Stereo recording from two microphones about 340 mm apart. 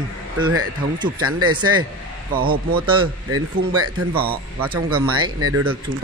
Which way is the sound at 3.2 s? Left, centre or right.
Right.